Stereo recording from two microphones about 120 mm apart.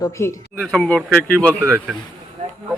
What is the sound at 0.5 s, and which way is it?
Speech, 5° left (ahead or behind).